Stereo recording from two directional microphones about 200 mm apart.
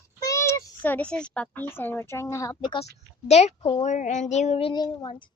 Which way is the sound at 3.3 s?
35° left (ahead or behind).